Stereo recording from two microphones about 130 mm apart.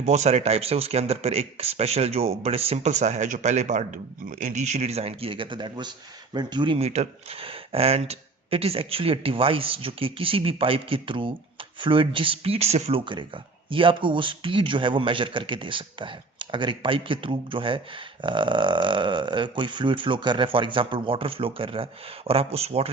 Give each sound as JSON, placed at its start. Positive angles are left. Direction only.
{"t": 0.0, "sound": "speech", "side_deg": -60}
{"t": 6.7, "sound": "speech", "side_deg": -55}
{"t": 13.1, "sound": "speech", "side_deg": -40}